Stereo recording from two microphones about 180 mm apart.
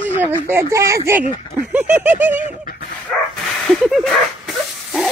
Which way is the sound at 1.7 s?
10° right (ahead or behind).